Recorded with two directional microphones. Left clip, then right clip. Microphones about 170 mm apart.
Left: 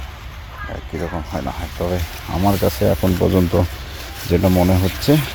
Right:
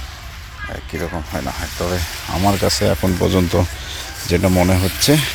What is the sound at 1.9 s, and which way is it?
Speech, 5° right (ahead or behind).